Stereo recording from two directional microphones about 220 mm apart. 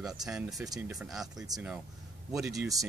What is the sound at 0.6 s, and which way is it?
Speech, 15° right (ahead or behind).